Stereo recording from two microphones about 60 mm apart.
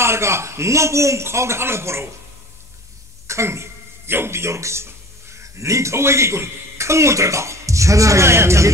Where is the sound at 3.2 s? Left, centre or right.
Right.